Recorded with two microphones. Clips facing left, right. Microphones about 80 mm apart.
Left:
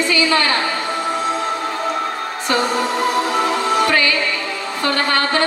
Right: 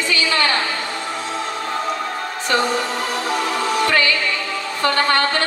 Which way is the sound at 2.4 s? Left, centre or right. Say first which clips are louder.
Left 1 dB; left.